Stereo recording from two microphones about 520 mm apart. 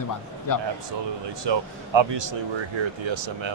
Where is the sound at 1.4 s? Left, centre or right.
Right.